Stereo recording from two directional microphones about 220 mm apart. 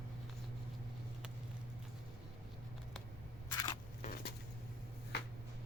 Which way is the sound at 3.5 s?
20° left (ahead or behind).